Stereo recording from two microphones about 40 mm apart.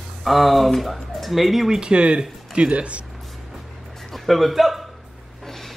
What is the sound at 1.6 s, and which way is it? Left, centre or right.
Speech, centre.